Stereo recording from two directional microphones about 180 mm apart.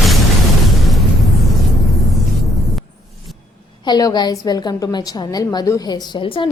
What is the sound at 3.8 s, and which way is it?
A woman's voice, 25° left (ahead or behind).